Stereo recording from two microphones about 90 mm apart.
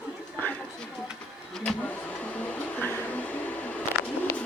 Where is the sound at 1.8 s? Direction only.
15° left (ahead or behind).